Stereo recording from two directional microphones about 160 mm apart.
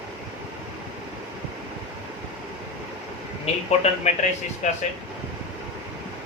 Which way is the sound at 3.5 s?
40° left (ahead or behind).